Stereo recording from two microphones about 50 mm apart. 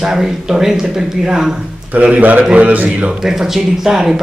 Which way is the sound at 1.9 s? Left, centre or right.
Right.